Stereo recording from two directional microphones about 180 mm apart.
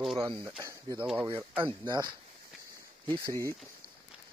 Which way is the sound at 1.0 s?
5° right (ahead or behind).